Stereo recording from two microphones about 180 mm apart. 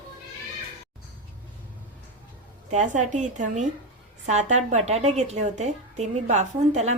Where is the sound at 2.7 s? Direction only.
40° right (ahead or behind).